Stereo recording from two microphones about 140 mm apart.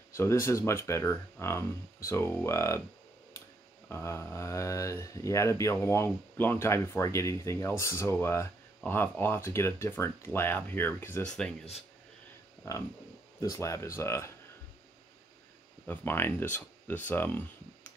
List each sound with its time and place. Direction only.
0.1 s speech: 20° left (ahead or behind)
3.9 s speech: 20° left (ahead or behind)
12.6 s speech: 25° left (ahead or behind)
15.9 s speech: 15° left (ahead or behind)